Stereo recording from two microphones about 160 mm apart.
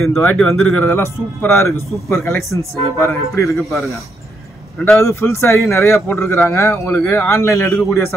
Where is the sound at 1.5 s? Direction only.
15° left (ahead or behind).